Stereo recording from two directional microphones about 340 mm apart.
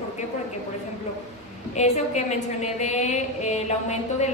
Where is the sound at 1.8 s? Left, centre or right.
Centre.